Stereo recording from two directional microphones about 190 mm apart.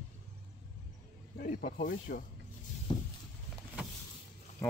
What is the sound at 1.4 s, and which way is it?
Speech, 50° left (ahead or behind).